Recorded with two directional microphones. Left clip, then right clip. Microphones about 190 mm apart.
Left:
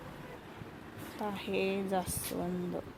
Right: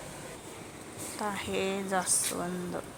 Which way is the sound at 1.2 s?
15° left (ahead or behind).